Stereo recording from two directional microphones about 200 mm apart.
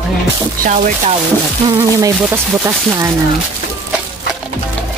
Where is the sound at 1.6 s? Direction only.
15° right (ahead or behind).